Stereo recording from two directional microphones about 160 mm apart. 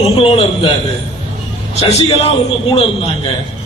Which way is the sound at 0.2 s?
35° left (ahead or behind).